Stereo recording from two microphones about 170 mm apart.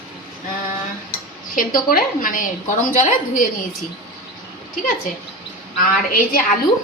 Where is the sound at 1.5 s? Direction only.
55° left (ahead or behind).